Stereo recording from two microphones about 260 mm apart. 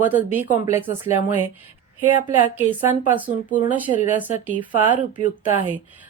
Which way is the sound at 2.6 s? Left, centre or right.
Centre.